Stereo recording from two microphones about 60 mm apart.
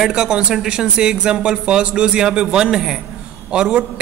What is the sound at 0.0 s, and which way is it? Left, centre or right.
A woman's voice, centre.